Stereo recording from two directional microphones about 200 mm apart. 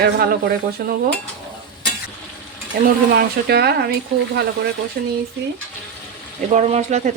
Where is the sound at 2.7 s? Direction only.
55° right (ahead or behind).